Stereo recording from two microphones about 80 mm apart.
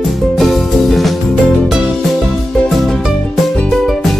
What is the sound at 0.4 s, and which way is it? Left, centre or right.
Music, centre.